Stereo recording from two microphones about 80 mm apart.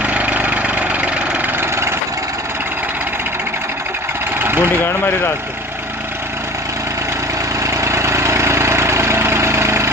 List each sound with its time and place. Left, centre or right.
0.0 s engine: centre
4.4 s engine: right
7.6 s engine: right